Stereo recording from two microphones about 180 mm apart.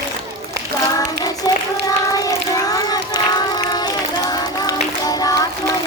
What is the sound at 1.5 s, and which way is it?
Child singing, 20° left (ahead or behind).